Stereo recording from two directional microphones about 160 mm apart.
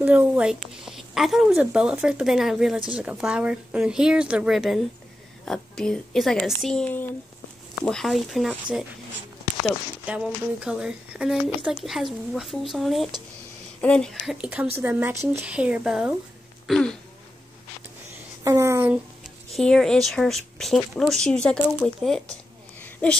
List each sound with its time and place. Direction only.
0.0 s a woman's voice: 10° right (ahead or behind)
10.0 s speech: 5° right (ahead or behind)
14.4 s speech: 10° right (ahead or behind)
16.6 s throat clearing: centre (ahead or behind)
18.4 s speech: 20° right (ahead or behind)
19.5 s speech: centre (ahead or behind)
21.8 s a sound: 5° left (ahead or behind)